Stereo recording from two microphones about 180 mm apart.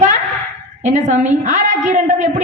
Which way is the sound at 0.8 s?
40° right (ahead or behind).